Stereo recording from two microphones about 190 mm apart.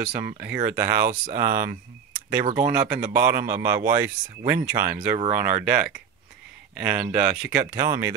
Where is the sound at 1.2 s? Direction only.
50° right (ahead or behind).